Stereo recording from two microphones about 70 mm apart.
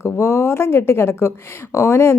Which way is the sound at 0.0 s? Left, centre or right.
Left.